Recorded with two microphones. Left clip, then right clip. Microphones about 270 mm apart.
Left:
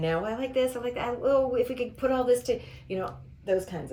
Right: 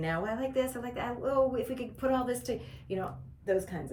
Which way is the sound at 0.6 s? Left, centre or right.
Centre.